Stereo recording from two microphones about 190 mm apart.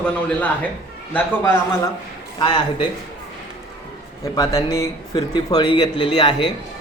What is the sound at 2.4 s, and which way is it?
Speech, 25° left (ahead or behind).